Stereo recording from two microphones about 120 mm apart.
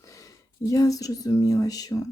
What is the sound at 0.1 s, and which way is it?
Speech, 25° left (ahead or behind).